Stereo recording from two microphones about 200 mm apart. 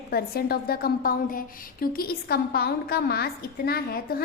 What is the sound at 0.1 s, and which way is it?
A woman's voice, 50° left (ahead or behind).